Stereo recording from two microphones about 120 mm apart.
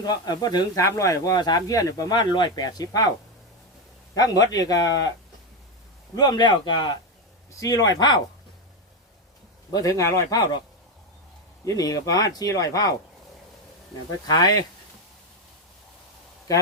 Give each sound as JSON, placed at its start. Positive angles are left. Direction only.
{"t": 0.0, "sound": "speech", "side_deg": 35}
{"t": 4.1, "sound": "speech", "side_deg": 30}
{"t": 6.1, "sound": "speech", "side_deg": 35}
{"t": 9.7, "sound": "speech", "side_deg": 25}
{"t": 11.6, "sound": "speech", "side_deg": 30}
{"t": 14.3, "sound": "speech", "side_deg": 35}